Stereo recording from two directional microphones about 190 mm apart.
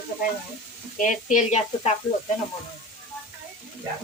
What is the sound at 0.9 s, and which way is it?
Speech, 40° left (ahead or behind).